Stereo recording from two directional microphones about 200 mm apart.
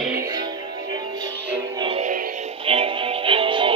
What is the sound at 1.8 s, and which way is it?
Music, 30° right (ahead or behind).